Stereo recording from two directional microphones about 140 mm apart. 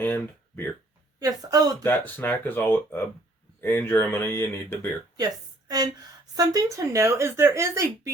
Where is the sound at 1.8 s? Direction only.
15° left (ahead or behind).